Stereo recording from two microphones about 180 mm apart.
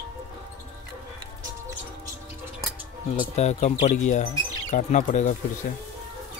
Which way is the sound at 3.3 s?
40° left (ahead or behind).